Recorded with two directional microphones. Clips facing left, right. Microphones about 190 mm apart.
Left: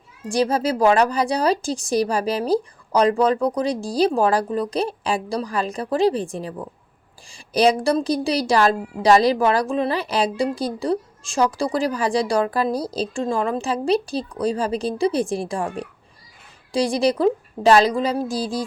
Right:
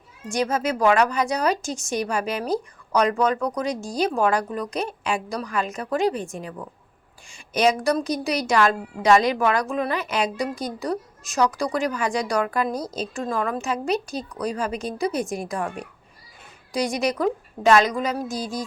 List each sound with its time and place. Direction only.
0.3 s a woman's voice: 35° left (ahead or behind)